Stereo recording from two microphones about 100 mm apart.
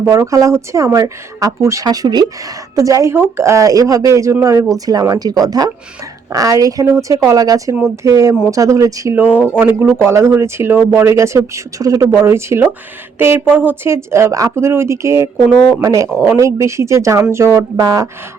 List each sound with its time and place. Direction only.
0.0 s speech: 30° right (ahead or behind)
9.1 s speech: 15° right (ahead or behind); by 18.1 s 35° right (ahead or behind)